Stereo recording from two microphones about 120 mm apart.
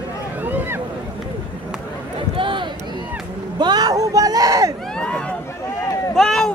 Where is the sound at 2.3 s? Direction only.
45° right (ahead or behind).